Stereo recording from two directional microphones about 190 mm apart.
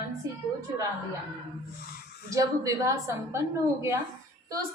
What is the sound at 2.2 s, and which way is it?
A woman's voice, 20° right (ahead or behind).